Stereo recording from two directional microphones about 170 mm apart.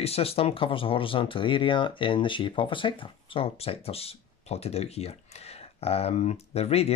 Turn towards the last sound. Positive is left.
turn(degrees=35)  # may be behind; listen again after turning